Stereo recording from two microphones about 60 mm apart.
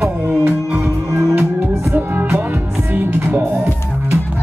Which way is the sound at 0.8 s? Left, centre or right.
Right.